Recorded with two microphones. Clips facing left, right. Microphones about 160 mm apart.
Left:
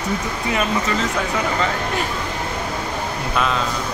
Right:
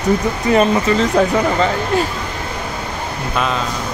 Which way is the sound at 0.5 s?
35° right (ahead or behind).